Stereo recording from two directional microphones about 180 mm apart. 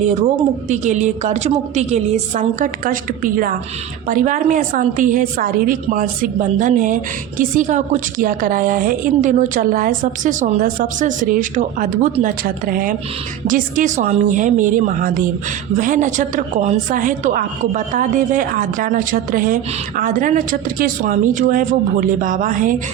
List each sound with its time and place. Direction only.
0.0 s a woman's voice: 40° right (ahead or behind)